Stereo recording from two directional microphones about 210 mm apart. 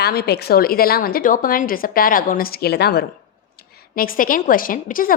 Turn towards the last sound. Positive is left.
turn(degrees=40)  # may be behind; listen again after turning